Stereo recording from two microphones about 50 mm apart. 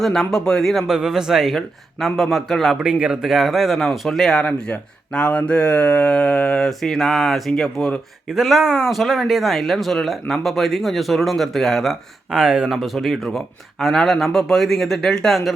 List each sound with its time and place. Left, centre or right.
0.0 s speech: centre
0.9 s a man's voice: centre
2.7 s a man's voice: centre
3.2 s speech: centre
4.4 s speech: left
6.6 s speech: centre
7.6 s speech: centre
8.3 s speech: centre
12.3 s a man's voice: centre
12.7 s speech: centre